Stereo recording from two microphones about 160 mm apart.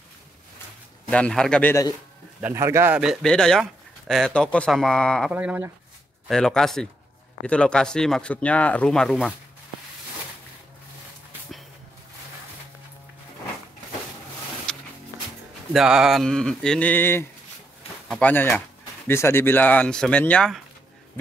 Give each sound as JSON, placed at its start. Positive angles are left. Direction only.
{"t": 1.1, "sound": "speech", "side_deg": 5}
{"t": 2.4, "sound": "speech", "side_deg": -15}
{"t": 5.3, "sound": "speech", "side_deg": -10}
{"t": 6.2, "sound": "speech", "side_deg": 5}
{"t": 15.7, "sound": "speech", "side_deg": -5}